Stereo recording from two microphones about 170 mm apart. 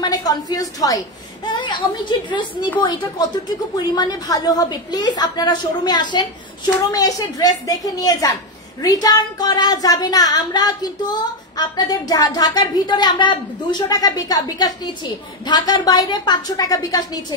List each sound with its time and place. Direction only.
0.0 s speech: 20° left (ahead or behind)